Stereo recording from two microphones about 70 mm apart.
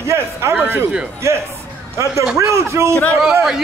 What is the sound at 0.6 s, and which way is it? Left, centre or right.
Speech, right.